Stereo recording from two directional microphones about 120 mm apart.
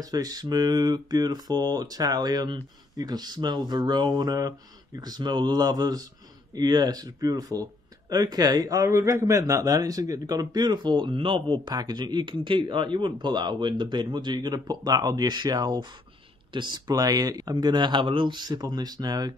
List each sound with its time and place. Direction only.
0.0 s a man's voice: 30° right (ahead or behind)